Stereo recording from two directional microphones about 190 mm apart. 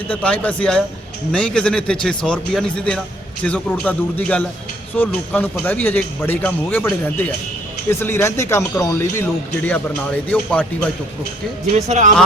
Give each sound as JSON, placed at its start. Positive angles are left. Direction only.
{"t": 0.1, "sound": "speech", "side_deg": 5}
{"t": 11.7, "sound": "speech", "side_deg": -40}